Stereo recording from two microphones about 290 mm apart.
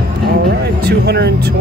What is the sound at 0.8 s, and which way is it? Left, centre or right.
Speech, right.